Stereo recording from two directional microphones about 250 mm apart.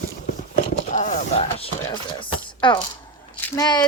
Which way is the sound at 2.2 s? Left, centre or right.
Centre.